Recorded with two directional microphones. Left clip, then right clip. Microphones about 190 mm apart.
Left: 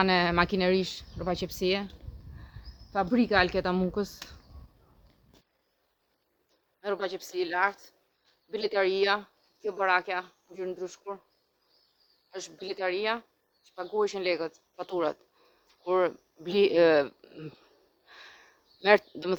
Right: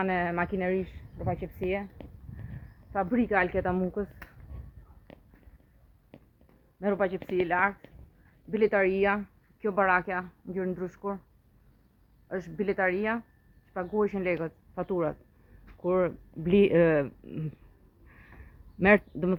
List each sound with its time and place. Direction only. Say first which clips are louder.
0.0 s speech: left 4 dB; 35° left (ahead or behind)
2.9 s a woman's voice: left 2 dB; 10° left (ahead or behind)
6.8 s a woman's voice: right 4 dB; 10° left (ahead or behind)
8.6 s speech: right 3 dB; 20° left (ahead or behind)
9.6 s a woman's voice: right 1 dB; centre (ahead or behind)
12.6 s a woman's voice: right 2 dB; 5° left (ahead or behind)
18.8 s a woman's voice: even; 20° left (ahead or behind)